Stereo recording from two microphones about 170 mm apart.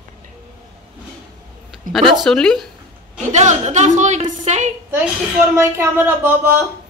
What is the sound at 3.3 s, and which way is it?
Speech, 45° right (ahead or behind).